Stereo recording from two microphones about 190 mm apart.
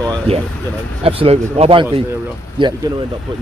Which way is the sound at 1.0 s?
30° right (ahead or behind).